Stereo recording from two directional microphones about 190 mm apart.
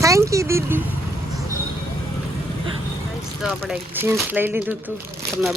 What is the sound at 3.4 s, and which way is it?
Speech, 5° right (ahead or behind).